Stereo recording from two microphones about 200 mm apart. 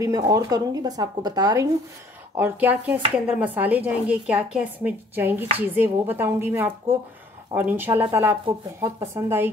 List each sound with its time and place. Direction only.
0.0 s speech: 15° right (ahead or behind)